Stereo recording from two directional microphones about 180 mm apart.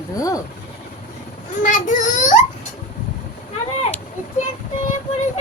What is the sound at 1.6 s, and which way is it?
Child singing, 45° left (ahead or behind).